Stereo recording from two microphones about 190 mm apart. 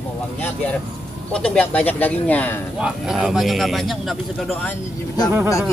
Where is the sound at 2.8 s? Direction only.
5° right (ahead or behind).